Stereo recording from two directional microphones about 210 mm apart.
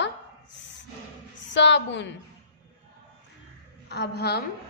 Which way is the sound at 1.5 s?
60° left (ahead or behind).